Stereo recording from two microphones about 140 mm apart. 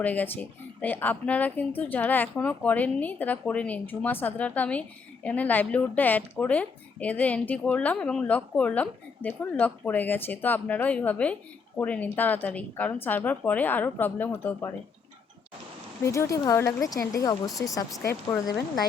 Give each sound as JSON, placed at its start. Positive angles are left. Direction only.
{"t": 0.0, "sound": "speech", "side_deg": 10}
{"t": 16.0, "sound": "speech", "side_deg": 20}